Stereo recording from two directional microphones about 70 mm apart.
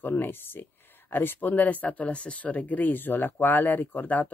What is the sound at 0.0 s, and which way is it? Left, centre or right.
Speech, left.